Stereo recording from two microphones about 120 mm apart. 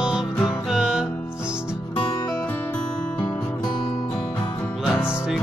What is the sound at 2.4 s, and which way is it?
Music, 10° left (ahead or behind).